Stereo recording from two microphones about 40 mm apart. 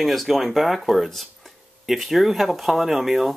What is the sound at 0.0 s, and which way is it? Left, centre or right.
Speech, centre.